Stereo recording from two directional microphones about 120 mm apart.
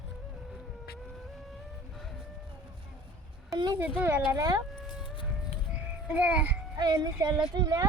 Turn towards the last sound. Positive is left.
turn(degrees=-30)  # may be behind; listen again after turning